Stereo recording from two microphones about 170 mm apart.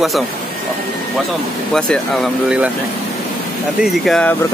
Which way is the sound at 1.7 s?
5° left (ahead or behind).